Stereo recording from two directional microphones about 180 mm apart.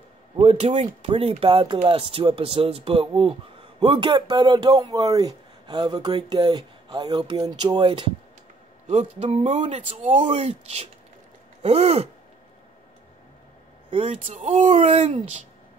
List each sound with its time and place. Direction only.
0.4 s speech: 35° right (ahead or behind)
8.8 s speech: 40° right (ahead or behind)
13.8 s speech: 35° right (ahead or behind)